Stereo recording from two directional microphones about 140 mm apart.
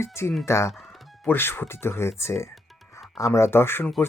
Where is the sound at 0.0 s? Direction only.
20° left (ahead or behind).